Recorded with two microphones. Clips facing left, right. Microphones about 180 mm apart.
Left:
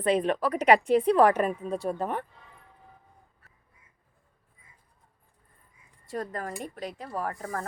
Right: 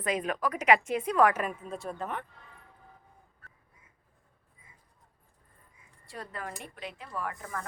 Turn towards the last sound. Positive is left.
turn(degrees=35)  # may be behind; listen again after turning